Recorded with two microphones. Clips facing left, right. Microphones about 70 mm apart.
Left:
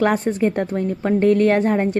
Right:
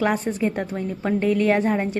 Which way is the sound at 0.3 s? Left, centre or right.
Left.